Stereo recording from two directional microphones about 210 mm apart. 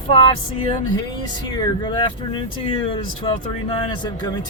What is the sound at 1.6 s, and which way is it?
Speech, 20° left (ahead or behind).